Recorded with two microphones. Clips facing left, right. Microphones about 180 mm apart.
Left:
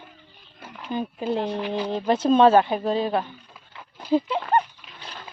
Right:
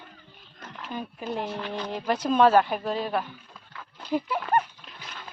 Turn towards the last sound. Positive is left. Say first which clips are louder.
# even
turn(degrees=5)  # may be behind; listen again after turning